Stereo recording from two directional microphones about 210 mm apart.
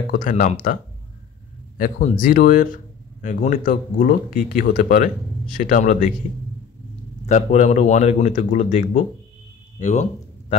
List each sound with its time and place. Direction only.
0.1 s speech: 40° left (ahead or behind)
1.8 s speech: 40° left (ahead or behind)
7.2 s speech: 35° left (ahead or behind)